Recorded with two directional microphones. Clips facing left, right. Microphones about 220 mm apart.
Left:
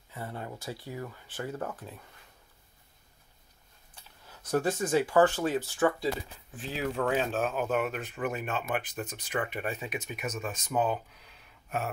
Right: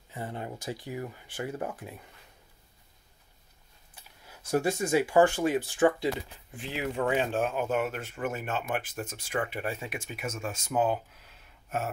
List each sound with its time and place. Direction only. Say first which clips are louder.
0.1 s speech: right 2 dB; 20° right (ahead or behind)
3.9 s speech: right 1 dB; 10° right (ahead or behind)